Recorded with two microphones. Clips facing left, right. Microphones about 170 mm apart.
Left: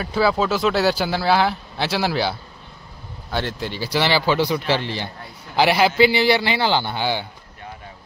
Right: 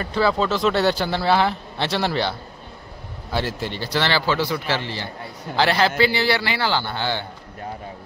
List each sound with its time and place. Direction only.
0.0 s a man's voice: 5° left (ahead or behind)